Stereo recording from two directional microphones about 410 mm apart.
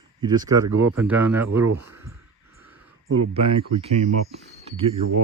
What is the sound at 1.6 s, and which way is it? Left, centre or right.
Speech, right.